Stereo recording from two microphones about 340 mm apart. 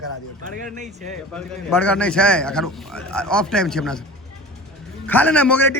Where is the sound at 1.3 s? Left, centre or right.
Centre.